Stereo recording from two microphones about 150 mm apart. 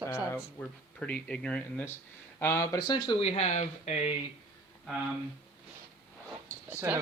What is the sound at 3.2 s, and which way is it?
Speech, 45° left (ahead or behind).